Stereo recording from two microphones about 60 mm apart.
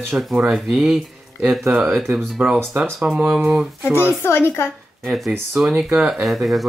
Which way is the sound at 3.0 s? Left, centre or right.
Right.